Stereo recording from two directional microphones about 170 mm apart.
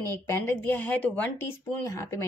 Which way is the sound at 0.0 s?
15° left (ahead or behind).